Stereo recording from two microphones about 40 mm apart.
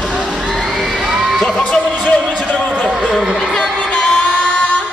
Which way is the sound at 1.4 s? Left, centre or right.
Centre.